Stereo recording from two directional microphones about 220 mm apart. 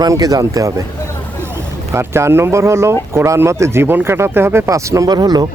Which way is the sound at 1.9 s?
10° right (ahead or behind).